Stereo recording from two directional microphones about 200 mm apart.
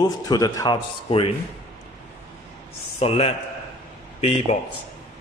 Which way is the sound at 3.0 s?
30° left (ahead or behind).